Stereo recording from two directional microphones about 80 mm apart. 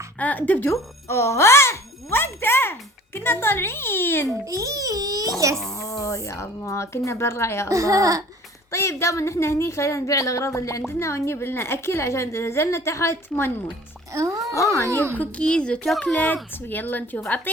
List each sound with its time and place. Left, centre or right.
0.2 s a child's voice: centre
0.7 s music: left
3.2 s a child's voice: left
4.4 s speech: right
5.7 s a woman's voice: left
7.7 s speech: right
8.7 s a woman's voice: left
14.1 s speech: right
14.5 s a woman's voice: left
15.2 s a child's voice: centre